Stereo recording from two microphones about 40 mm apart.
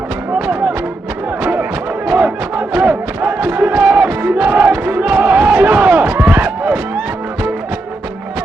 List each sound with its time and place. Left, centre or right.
0.3 s music: right
2.0 s crowd: right
6.3 s a sound: right